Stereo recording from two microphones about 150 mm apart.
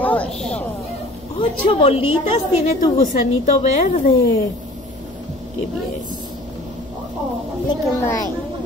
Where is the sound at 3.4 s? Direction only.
50° left (ahead or behind).